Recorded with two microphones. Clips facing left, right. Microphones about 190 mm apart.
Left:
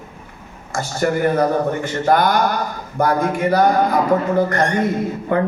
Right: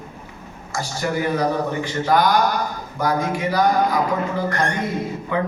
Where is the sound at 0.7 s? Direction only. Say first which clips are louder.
Left 5 dB; 55° left (ahead or behind).